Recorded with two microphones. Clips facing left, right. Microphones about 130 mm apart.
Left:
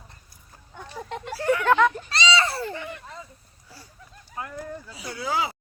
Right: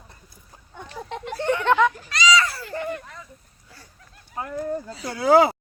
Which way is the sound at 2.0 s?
30° left (ahead or behind).